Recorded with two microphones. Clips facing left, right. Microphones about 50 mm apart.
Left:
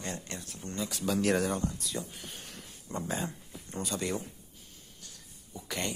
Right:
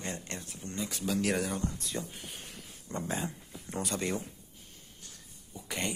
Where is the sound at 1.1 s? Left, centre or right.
Centre.